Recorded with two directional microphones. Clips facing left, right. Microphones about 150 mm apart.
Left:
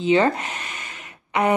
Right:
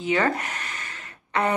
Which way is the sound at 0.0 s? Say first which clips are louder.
Left 5 dB; 25° left (ahead or behind).